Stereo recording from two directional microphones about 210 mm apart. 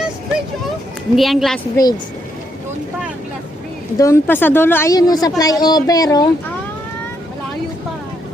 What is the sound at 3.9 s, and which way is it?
A woman's voice, 15° left (ahead or behind).